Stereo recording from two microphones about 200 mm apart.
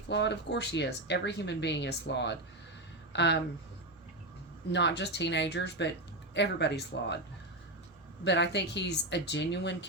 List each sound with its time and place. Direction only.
0.1 s speech: 60° left (ahead or behind)
4.7 s speech: 60° left (ahead or behind)
8.2 s speech: 60° left (ahead or behind)